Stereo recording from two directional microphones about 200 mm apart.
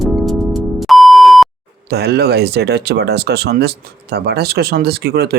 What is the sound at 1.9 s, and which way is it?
Speech, 55° right (ahead or behind).